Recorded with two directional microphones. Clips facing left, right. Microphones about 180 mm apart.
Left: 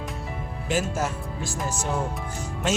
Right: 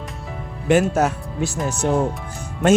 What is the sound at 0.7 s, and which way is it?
Speech, 65° right (ahead or behind).